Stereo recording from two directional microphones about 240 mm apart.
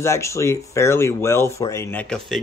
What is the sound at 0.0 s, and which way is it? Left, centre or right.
Speech, centre.